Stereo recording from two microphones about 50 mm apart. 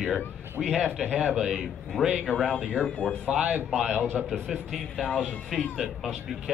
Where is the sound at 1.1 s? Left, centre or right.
Centre.